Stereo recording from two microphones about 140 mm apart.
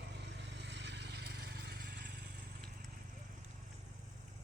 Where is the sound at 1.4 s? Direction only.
90° right.